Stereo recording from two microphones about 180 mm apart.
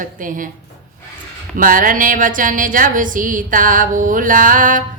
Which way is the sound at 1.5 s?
50° right (ahead or behind).